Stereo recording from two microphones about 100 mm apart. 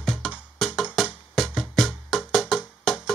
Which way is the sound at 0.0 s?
Centre (ahead or behind).